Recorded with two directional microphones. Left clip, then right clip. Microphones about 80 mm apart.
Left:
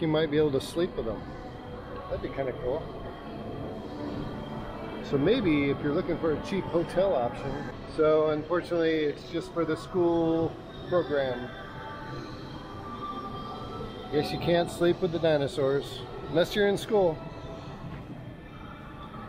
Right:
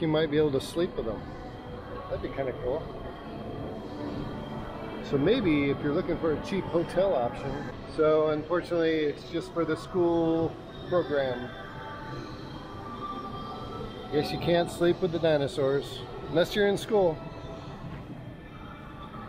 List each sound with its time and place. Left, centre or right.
0.0 s speech: centre
5.1 s a man's voice: centre; by 11.3 s right
14.1 s speech: centre